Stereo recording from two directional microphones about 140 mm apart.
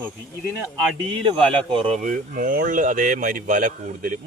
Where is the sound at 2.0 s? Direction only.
70° right (ahead or behind).